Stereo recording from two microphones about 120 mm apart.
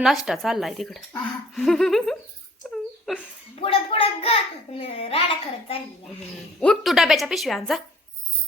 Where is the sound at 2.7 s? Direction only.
Centre (ahead or behind).